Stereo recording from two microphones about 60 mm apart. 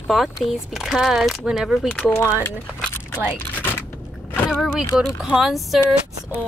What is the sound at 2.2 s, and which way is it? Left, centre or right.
Speech, left.